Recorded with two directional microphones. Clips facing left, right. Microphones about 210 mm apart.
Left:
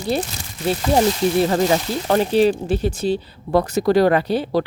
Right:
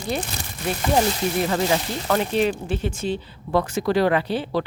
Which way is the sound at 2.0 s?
35° left (ahead or behind).